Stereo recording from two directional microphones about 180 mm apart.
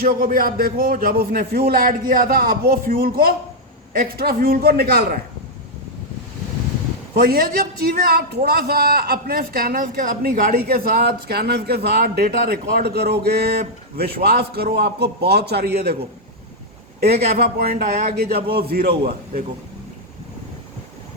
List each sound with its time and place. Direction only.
0.0 s a man's voice: 50° right (ahead or behind)
7.1 s a man's voice: 55° right (ahead or behind)
17.1 s a man's voice: 60° right (ahead or behind)